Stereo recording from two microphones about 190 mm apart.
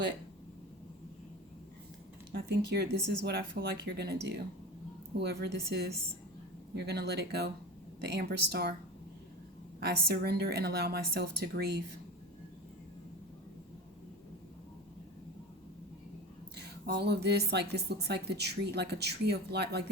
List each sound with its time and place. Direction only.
2.3 s speech: 60° right (ahead or behind)
9.8 s speech: 55° right (ahead or behind)
16.6 s speech: 60° right (ahead or behind)